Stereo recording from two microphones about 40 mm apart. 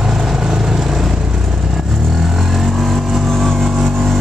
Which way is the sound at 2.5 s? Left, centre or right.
Centre.